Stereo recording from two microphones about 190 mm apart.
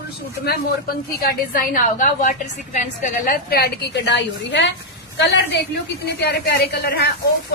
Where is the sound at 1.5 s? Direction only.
45° left (ahead or behind).